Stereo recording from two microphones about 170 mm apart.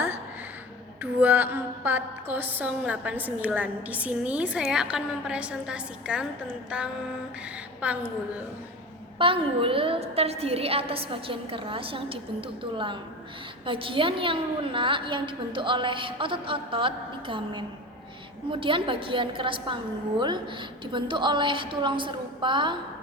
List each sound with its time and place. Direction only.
1.2 s a woman's voice: 10° right (ahead or behind)
6.7 s mantra: 5° right (ahead or behind)
7.8 s a woman's voice: 10° right (ahead or behind)
9.1 s a woman's voice: 30° right (ahead or behind)